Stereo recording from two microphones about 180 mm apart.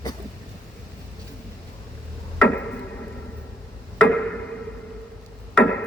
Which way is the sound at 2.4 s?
5° left (ahead or behind).